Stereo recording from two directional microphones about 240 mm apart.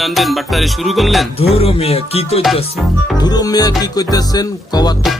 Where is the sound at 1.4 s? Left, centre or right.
Left.